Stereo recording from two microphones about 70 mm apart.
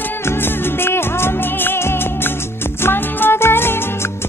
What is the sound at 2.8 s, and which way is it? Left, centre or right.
Music, left.